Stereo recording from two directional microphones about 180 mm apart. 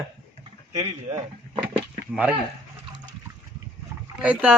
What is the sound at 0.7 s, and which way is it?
Speech, 40° right (ahead or behind).